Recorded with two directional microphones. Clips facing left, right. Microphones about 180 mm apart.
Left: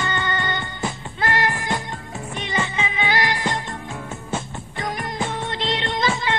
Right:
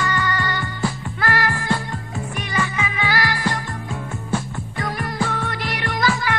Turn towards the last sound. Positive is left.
turn(degrees=25)  # may be behind; listen again after turning